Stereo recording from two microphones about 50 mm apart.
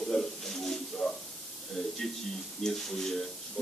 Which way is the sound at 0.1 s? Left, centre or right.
Centre.